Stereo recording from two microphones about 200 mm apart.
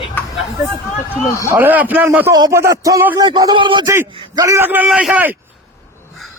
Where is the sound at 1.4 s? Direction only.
10° right (ahead or behind).